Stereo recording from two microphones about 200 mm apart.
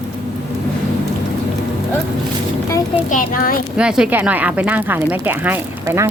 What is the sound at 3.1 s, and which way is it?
Speech, 45° left (ahead or behind).